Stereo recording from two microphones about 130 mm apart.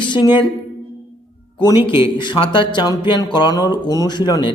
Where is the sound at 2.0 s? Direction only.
40° left (ahead or behind).